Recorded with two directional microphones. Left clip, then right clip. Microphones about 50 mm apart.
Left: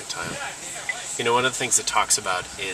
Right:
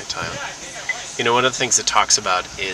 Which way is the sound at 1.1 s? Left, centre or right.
Right.